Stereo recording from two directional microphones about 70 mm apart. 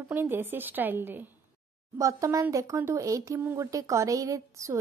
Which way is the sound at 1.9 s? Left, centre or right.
Right.